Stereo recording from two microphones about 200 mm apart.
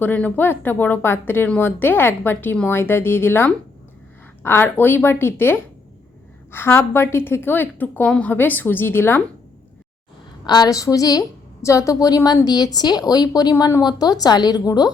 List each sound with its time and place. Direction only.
0.0 s speech: 10° left (ahead or behind)
10.4 s a woman's voice: 20° left (ahead or behind)